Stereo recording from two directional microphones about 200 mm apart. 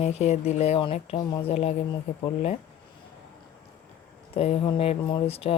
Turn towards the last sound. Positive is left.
turn(degrees=30)  # may be behind; listen again after turning